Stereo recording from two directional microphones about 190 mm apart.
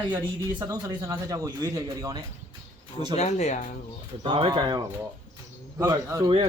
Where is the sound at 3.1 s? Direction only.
35° left (ahead or behind).